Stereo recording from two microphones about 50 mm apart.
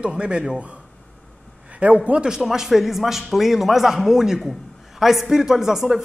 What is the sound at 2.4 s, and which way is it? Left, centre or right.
A man's voice, centre.